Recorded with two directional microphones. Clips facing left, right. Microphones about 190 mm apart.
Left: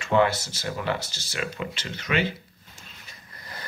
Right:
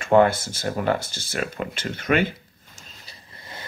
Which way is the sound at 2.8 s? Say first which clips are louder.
Right 1 dB; 35° right (ahead or behind).